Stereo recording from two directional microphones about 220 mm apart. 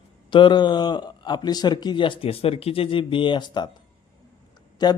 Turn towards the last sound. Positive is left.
turn(degrees=20)  # may be behind; listen again after turning